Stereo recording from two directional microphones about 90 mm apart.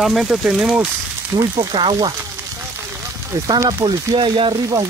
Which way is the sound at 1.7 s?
70° right (ahead or behind).